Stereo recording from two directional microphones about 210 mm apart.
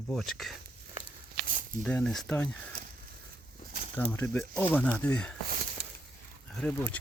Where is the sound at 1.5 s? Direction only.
40° right (ahead or behind).